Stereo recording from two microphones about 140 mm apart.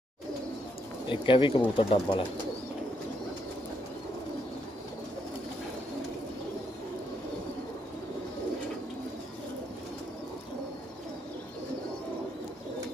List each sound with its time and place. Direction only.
1.0 s speech: 35° left (ahead or behind)